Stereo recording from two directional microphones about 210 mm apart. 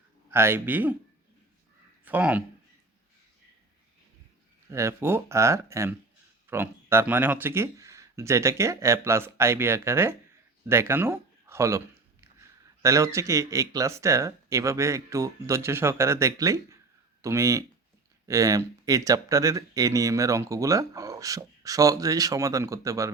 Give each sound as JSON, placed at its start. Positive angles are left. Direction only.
{"t": 0.3, "sound": "speech", "side_deg": -10}
{"t": 2.0, "sound": "speech", "side_deg": -10}
{"t": 4.7, "sound": "speech", "side_deg": -15}
{"t": 12.8, "sound": "speech", "side_deg": -15}